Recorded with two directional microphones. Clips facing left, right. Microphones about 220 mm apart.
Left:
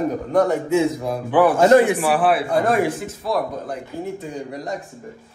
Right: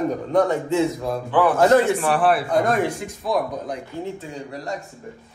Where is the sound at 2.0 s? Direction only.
5° left (ahead or behind).